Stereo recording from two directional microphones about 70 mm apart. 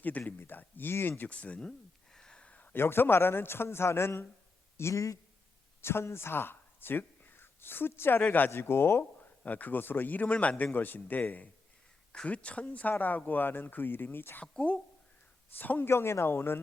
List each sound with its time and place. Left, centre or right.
0.0 s a man's voice: left
1.3 s a man's voice: centre
2.1 s a sound: centre
2.7 s a man's voice: left
9.4 s a man's voice: left
14.4 s speech: centre
15.5 s a man's voice: left
15.9 s a man's voice: left